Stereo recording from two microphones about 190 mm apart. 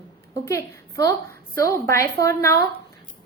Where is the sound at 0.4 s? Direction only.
15° left (ahead or behind).